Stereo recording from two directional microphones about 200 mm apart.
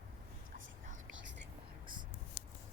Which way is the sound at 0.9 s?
70° right (ahead or behind).